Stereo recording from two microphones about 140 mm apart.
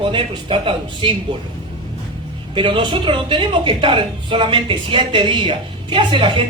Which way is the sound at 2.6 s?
35° right (ahead or behind).